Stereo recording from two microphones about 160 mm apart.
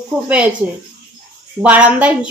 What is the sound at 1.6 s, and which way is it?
Speech, 10° right (ahead or behind).